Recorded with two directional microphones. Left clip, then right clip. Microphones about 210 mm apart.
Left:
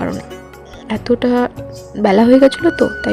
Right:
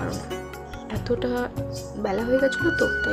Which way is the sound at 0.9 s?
30° left (ahead or behind).